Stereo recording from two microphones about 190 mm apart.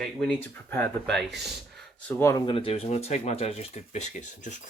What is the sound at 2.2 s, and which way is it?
Speech, 20° left (ahead or behind).